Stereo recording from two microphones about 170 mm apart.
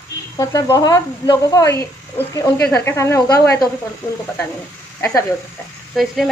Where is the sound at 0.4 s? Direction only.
20° left (ahead or behind).